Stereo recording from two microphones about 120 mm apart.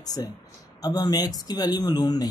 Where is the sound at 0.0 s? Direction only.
30° left (ahead or behind).